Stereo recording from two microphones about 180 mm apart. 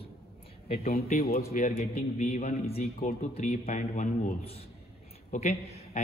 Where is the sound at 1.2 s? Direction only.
60° left (ahead or behind).